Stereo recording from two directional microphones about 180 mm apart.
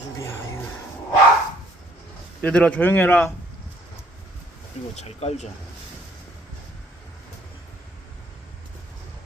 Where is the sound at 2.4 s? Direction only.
5° left (ahead or behind).